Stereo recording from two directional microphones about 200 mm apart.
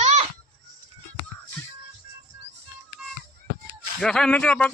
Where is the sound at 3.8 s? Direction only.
5° left (ahead or behind).